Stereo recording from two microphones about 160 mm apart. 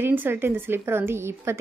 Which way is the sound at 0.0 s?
15° right (ahead or behind).